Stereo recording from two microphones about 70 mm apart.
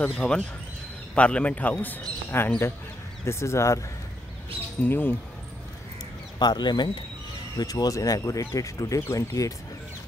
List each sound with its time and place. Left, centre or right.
0.0 s a man's voice: centre
3.3 s speech: left
4.8 s a man's voice: left
6.4 s speech: left
7.5 s speech: left